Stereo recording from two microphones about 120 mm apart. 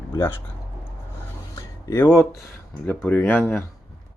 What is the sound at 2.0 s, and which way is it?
Speech, centre (ahead or behind).